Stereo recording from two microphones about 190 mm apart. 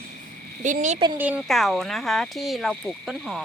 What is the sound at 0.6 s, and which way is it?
Speech, 40° right (ahead or behind).